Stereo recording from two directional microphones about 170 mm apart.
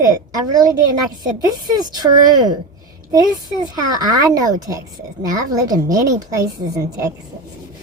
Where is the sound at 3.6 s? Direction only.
25° right (ahead or behind).